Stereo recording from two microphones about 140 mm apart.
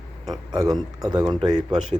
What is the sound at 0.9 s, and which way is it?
Speech, 30° right (ahead or behind).